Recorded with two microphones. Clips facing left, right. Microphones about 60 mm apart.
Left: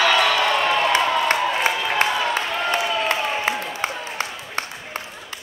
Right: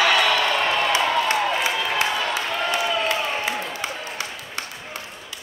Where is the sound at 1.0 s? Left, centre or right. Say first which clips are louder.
Left 1 dB; centre.